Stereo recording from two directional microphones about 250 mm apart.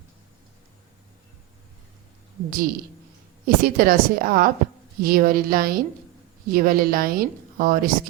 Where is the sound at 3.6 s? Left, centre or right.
Right.